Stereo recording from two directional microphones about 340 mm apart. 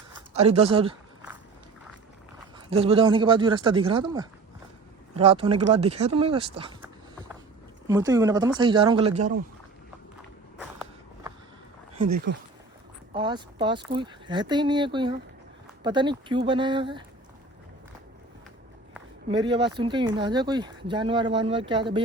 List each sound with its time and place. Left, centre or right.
0.3 s speech: centre
2.6 s speech: centre
7.9 s speech: centre
10.6 s walk: centre
11.9 s speech: right
13.1 s speech: centre
19.3 s speech: centre